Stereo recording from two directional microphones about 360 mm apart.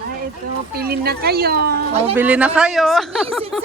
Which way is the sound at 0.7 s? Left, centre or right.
Right.